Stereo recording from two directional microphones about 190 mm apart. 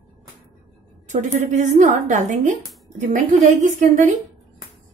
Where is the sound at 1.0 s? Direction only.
40° right (ahead or behind).